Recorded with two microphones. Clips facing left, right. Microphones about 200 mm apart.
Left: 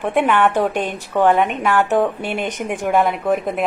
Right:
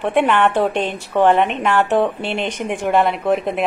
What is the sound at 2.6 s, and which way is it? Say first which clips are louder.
Speech: right 1 dB; 5° left (ahead or behind).